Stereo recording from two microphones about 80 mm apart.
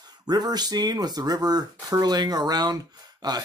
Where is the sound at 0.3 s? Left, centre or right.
Right.